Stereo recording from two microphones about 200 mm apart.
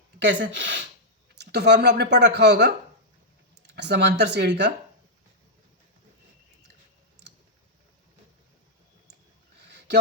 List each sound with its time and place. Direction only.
0.4 s speech: 65° right (ahead or behind)
1.4 s speech: 55° right (ahead or behind)
9.6 s a sound: 60° right (ahead or behind)